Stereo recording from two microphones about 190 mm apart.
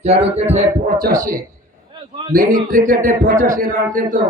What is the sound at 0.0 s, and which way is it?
Speech, 35° right (ahead or behind).